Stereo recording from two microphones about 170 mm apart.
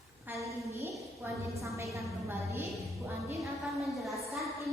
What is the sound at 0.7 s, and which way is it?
A woman's voice, 15° right (ahead or behind).